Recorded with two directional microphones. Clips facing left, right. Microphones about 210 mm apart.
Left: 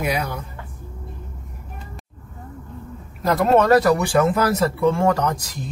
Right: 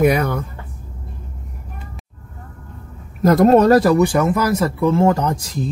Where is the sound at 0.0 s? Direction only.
55° right (ahead or behind).